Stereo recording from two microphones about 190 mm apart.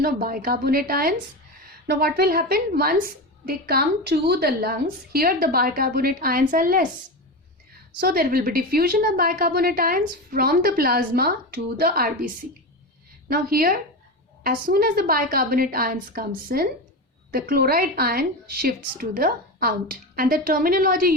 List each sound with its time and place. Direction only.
0.0 s a woman's voice: 50° right (ahead or behind)
8.0 s a woman's voice: 50° right (ahead or behind)